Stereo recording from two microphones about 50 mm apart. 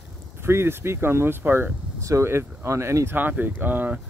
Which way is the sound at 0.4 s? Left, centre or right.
Right.